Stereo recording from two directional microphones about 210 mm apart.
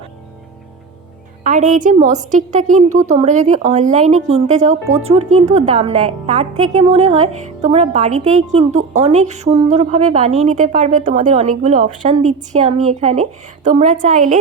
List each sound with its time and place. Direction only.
1.7 s speech: 35° right (ahead or behind)